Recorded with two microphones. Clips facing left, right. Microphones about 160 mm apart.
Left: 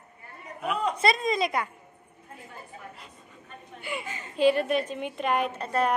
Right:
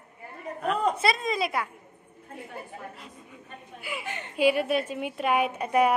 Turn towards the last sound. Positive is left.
turn(degrees=-10)  # may be behind; listen again after turning